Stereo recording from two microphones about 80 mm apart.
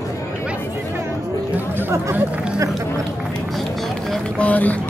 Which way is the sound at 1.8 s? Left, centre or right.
Right.